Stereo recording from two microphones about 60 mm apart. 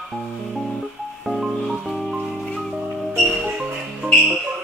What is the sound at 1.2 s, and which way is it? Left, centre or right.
Music, centre.